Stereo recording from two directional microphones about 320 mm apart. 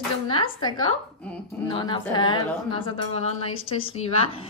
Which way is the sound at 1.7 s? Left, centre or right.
Centre.